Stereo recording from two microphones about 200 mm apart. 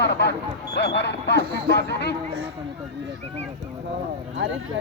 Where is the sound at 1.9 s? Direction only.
55° left (ahead or behind).